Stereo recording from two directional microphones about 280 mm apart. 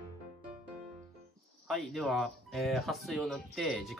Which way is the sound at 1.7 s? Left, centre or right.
Centre.